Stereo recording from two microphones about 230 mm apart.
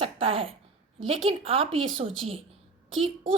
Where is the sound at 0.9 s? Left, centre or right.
Right.